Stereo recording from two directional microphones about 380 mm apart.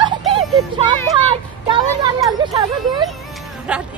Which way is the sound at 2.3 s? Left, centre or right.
Centre.